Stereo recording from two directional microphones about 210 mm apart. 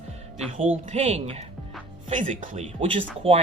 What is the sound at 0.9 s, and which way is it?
Speech, 30° right (ahead or behind).